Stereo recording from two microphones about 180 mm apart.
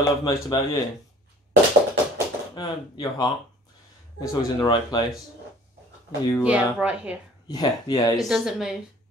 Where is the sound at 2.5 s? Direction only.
25° left (ahead or behind).